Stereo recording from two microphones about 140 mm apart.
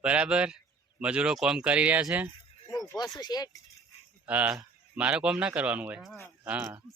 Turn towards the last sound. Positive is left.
turn(degrees=-15)  # may be behind; listen again after turning